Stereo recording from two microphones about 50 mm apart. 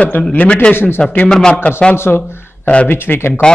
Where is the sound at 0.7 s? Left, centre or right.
Left.